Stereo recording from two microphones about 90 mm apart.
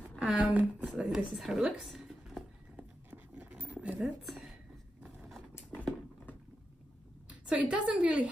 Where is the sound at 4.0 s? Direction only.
Centre (ahead or behind).